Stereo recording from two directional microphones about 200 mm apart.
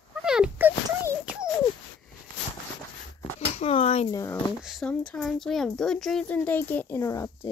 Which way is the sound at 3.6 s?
30° left (ahead or behind).